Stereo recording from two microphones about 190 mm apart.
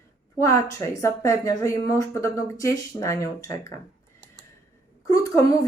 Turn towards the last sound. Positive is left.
turn(degrees=20)  # may be behind; listen again after turning